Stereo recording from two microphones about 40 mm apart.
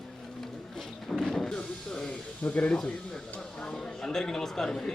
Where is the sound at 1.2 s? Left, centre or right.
Centre.